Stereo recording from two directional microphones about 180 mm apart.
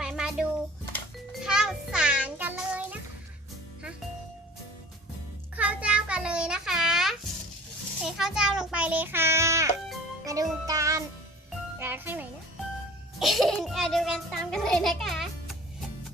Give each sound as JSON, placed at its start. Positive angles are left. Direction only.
{"t": 0.0, "sound": "a sound", "side_deg": -5}
{"t": 1.5, "sound": "child singing", "side_deg": -5}
{"t": 5.5, "sound": "a sound", "side_deg": -5}
{"t": 8.0, "sound": "child singing", "side_deg": -5}
{"t": 10.2, "sound": "music", "side_deg": -20}
{"t": 11.8, "sound": "speech", "side_deg": -10}
{"t": 13.1, "sound": "a child's voice", "side_deg": 0}